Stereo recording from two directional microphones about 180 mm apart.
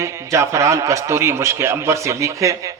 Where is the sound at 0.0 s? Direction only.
15° right (ahead or behind).